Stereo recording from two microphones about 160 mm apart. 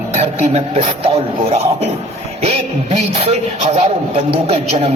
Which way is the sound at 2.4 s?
40° right (ahead or behind).